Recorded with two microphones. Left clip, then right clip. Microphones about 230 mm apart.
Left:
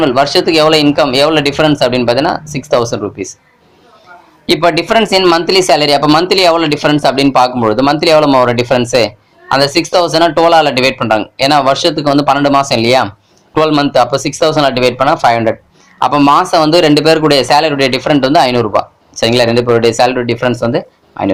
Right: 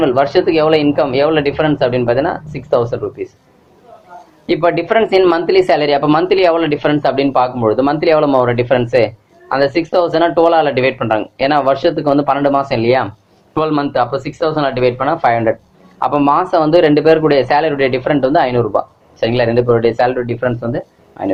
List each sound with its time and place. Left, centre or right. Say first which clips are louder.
0.0 s speech: left 2 dB; left
4.4 s speech: left 3 dB; left